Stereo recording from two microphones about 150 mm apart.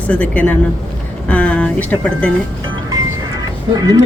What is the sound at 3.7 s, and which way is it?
Speech, 25° right (ahead or behind).